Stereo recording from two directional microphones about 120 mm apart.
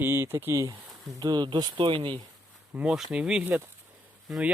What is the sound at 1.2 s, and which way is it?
Speech, 35° right (ahead or behind).